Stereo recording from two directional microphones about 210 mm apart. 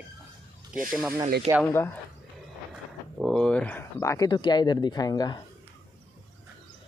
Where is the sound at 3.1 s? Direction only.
Centre (ahead or behind); by 5.4 s 20° left (ahead or behind).